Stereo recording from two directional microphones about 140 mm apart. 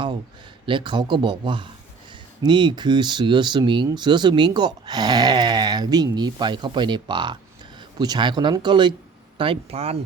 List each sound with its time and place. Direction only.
0.6 s speech: 35° right (ahead or behind)